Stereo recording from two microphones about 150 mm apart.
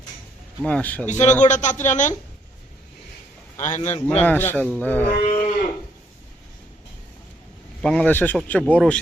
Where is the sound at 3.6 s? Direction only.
50° left (ahead or behind).